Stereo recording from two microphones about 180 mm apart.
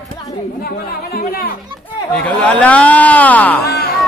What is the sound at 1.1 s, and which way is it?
Speech, 55° left (ahead or behind).